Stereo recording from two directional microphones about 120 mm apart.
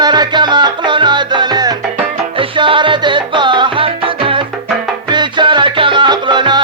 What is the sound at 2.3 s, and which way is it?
Music, 45° right (ahead or behind).